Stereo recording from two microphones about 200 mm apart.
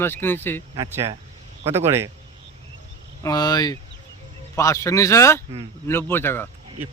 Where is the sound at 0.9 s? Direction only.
15° right (ahead or behind).